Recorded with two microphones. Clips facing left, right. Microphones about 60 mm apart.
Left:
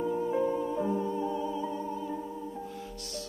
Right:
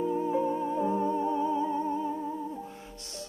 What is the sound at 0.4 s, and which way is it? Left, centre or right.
Music, right.